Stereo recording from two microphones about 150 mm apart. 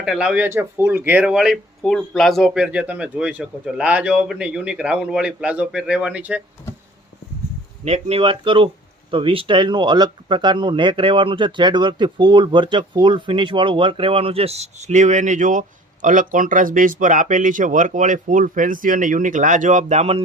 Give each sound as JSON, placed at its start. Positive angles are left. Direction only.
{"t": 0.0, "sound": "speech", "side_deg": -5}
{"t": 7.9, "sound": "speech", "side_deg": -45}